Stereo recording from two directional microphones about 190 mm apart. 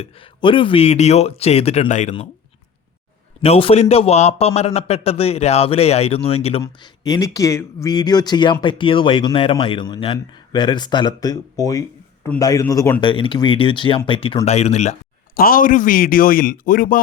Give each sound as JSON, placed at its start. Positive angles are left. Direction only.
{"t": 0.0, "sound": "a man's voice", "side_deg": 25}
{"t": 3.4, "sound": "a man's voice", "side_deg": 30}
{"t": 6.6, "sound": "a man's voice", "side_deg": 20}
{"t": 15.4, "sound": "speech", "side_deg": 50}